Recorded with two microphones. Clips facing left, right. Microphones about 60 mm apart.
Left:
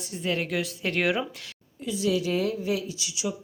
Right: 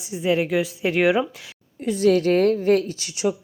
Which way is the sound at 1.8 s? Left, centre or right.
Right.